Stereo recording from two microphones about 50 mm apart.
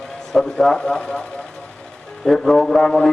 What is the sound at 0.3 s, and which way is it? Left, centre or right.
Speech, centre.